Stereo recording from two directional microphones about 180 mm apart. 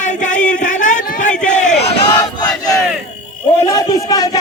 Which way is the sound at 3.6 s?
20° left (ahead or behind).